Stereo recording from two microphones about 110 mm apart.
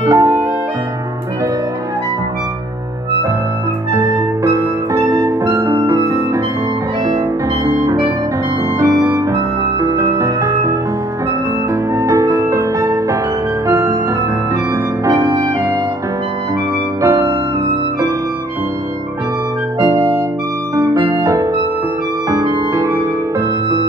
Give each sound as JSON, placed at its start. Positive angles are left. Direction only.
{"t": 0.0, "sound": "music", "side_deg": -30}
{"t": 3.9, "sound": "music", "side_deg": -30}
{"t": 7.6, "sound": "music", "side_deg": -30}
{"t": 11.9, "sound": "music", "side_deg": -30}
{"t": 15.0, "sound": "clarinet", "side_deg": -30}
{"t": 17.0, "sound": "music", "side_deg": -30}
{"t": 20.7, "sound": "music", "side_deg": -30}